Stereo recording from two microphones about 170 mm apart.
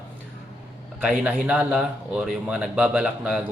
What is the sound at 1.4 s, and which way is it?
A man's voice, 5° right (ahead or behind).